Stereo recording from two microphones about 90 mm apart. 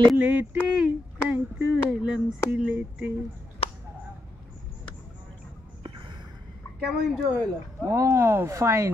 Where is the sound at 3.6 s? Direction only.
90° left.